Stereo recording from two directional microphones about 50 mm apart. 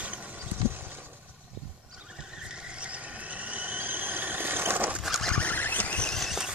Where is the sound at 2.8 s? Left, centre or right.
Right.